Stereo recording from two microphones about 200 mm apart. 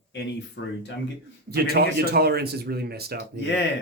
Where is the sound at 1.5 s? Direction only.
50° right (ahead or behind).